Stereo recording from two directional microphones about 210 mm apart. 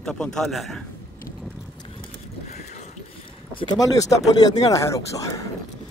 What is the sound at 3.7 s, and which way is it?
Speech, 15° left (ahead or behind).